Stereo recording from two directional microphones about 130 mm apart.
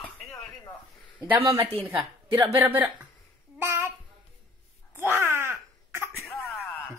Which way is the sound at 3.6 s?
20° right (ahead or behind).